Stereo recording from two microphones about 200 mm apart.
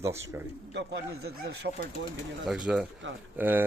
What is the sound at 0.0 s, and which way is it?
Speech, 15° right (ahead or behind).